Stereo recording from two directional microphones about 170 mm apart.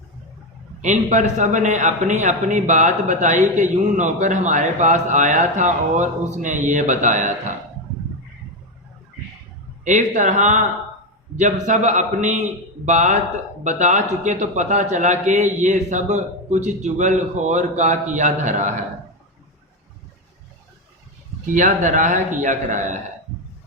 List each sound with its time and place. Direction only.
0.8 s a man's voice: 45° right (ahead or behind)
9.8 s a man's voice: 45° right (ahead or behind)
21.4 s a man's voice: 45° right (ahead or behind)